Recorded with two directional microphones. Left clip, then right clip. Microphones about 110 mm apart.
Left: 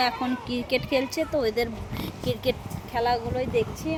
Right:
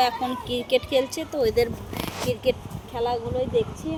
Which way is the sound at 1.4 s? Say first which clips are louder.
Right 9 dB; 20° left (ahead or behind).